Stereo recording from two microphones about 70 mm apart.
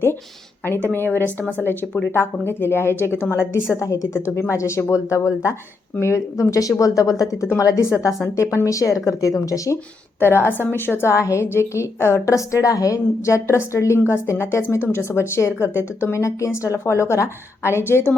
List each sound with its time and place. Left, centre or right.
0.9 s a woman's voice: left
2.1 s a woman's voice: left
3.8 s a woman's voice: left
10.2 s a woman's voice: left
11.1 s a woman's voice: left